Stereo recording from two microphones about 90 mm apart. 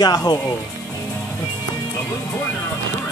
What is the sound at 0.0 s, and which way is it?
Speech, 45° left (ahead or behind).